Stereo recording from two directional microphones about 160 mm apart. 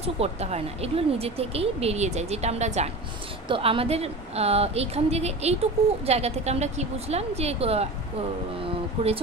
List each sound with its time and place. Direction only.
0.0 s a woman's voice: 40° right (ahead or behind)